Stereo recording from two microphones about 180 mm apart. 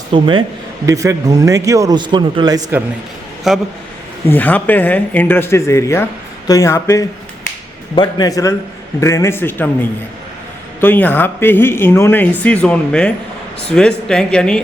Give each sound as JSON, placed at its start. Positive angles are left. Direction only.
{"t": 0.1, "sound": "a man's voice", "side_deg": -25}
{"t": 3.5, "sound": "speech", "side_deg": 0}
{"t": 4.3, "sound": "speech", "side_deg": 10}
{"t": 10.8, "sound": "speech", "side_deg": 10}